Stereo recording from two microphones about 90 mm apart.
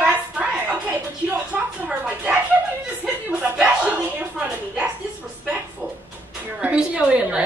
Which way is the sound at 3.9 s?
15° right (ahead or behind).